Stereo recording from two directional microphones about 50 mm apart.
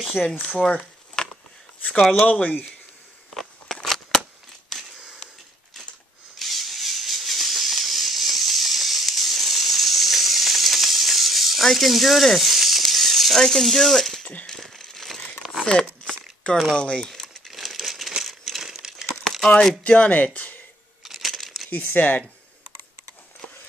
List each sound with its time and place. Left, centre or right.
0.0 s speech: centre
1.2 s a sound: centre
2.2 s speech: left
3.3 s scissors: centre
6.3 s a sound: centre
15.8 s crumpling: centre
16.7 s speech: centre
17.1 s crumpling: centre
18.2 s a sound: centre
19.2 s crumpling: centre
19.8 s speech: left
21.0 s a sound: centre
21.6 s speech: left